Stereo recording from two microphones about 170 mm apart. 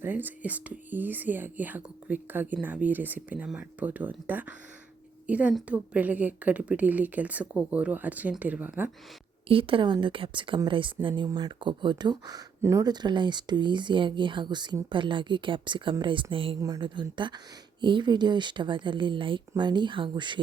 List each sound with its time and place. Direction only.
0.0 s speech: 10° right (ahead or behind)
9.5 s speech: 30° right (ahead or behind)
16.6 s speech: 20° right (ahead or behind)